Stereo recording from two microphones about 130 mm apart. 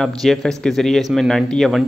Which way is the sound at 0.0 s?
Centre (ahead or behind).